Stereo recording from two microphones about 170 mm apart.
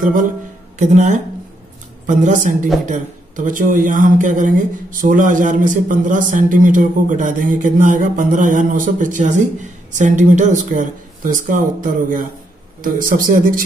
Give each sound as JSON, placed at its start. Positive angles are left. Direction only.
{"t": 0.0, "sound": "a man's voice", "side_deg": -50}